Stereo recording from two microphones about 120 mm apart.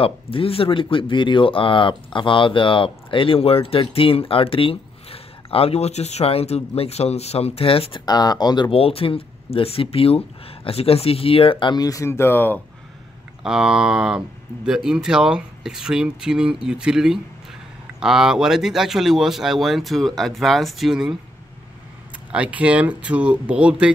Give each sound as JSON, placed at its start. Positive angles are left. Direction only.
{"t": 0.0, "sound": "speech", "side_deg": 50}
{"t": 8.0, "sound": "speech", "side_deg": 35}
{"t": 11.7, "sound": "speech", "side_deg": 30}
{"t": 13.4, "sound": "speech", "side_deg": -5}
{"t": 22.3, "sound": "speech", "side_deg": -10}